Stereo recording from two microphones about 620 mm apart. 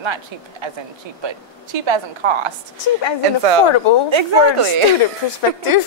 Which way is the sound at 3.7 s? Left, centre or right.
Left.